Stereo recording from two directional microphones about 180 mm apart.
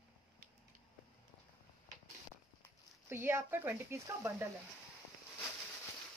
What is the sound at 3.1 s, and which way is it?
Speech, 15° right (ahead or behind).